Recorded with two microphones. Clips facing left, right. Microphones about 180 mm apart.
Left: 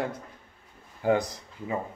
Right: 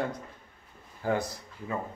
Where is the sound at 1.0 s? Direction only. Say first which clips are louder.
Left 5 dB; 20° left (ahead or behind).